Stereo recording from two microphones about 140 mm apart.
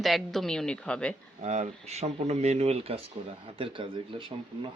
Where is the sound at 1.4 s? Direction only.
55° right (ahead or behind).